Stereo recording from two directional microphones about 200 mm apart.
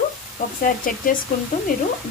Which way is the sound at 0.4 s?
40° left (ahead or behind).